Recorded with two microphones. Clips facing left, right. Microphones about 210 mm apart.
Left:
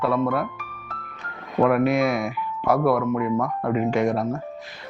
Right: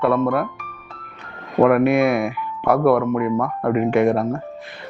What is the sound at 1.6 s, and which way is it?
Speech, 60° right (ahead or behind).